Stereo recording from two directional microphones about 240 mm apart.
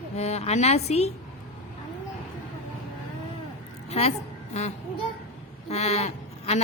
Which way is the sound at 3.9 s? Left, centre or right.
Left.